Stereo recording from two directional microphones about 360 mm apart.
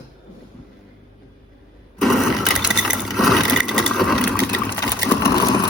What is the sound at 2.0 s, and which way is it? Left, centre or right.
Vehicle, centre.